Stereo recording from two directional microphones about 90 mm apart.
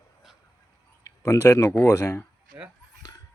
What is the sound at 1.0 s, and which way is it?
Speech, 35° left (ahead or behind).